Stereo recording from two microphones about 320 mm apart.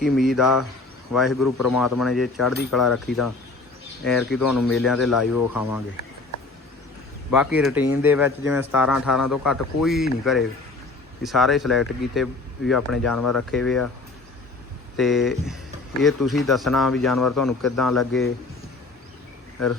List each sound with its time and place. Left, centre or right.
0.0 s speech: centre
5.3 s speech: left
7.3 s speech: centre
14.9 s speech: centre